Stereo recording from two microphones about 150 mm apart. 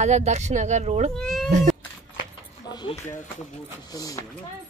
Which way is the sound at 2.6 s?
30° left (ahead or behind).